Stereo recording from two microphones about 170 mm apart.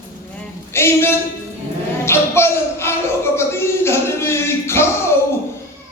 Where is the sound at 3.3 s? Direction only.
15° left (ahead or behind).